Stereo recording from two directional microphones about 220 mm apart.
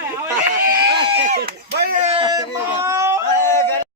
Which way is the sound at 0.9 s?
20° right (ahead or behind).